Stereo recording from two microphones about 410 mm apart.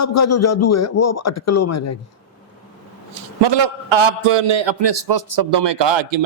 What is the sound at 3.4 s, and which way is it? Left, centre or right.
A man's voice, right.